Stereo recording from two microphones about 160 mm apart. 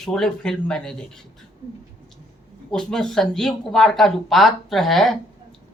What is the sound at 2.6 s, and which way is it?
Speech, 5° left (ahead or behind).